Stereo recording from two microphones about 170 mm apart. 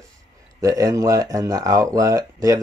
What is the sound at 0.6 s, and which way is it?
Speech, 20° right (ahead or behind).